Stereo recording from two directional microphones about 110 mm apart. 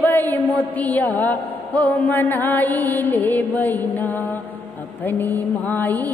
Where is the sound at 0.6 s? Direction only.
15° left (ahead or behind).